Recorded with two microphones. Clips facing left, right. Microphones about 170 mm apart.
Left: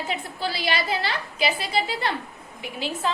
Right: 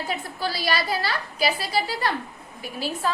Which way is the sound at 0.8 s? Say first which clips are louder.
Even; 20° left (ahead or behind).